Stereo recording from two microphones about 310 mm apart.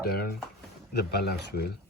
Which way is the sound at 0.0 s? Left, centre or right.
Left.